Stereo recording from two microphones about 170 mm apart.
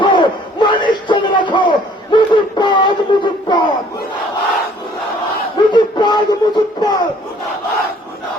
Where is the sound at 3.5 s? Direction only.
25° left (ahead or behind).